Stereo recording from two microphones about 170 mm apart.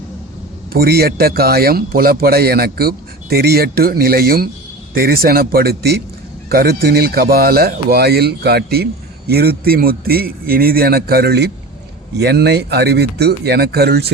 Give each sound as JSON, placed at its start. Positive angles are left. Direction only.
{"t": 0.7, "sound": "speech", "side_deg": -65}